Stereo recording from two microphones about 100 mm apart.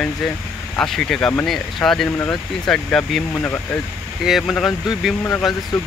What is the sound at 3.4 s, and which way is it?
Speech, 20° left (ahead or behind).